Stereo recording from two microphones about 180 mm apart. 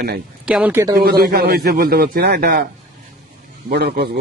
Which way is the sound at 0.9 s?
55° right (ahead or behind).